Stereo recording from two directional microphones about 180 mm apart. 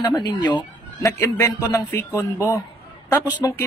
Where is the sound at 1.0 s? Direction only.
15° left (ahead or behind).